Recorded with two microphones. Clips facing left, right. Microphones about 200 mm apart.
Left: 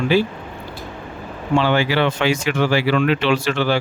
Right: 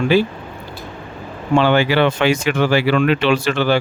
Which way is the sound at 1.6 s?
60° right (ahead or behind).